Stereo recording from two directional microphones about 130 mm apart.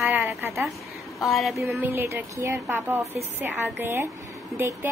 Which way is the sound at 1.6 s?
20° right (ahead or behind).